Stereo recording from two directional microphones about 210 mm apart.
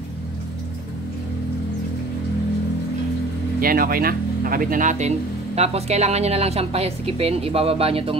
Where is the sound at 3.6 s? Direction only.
45° right (ahead or behind); by 8.1 s 25° right (ahead or behind).